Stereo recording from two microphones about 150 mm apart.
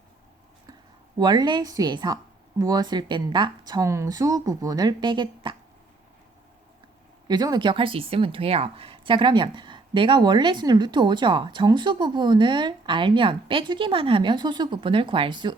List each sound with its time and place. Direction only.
1.2 s speech: 30° right (ahead or behind)
3.7 s speech: 20° right (ahead or behind)
7.3 s speech: 25° right (ahead or behind)